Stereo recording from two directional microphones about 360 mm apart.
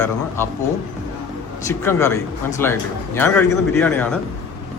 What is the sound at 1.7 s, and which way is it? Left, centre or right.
A man's voice, centre.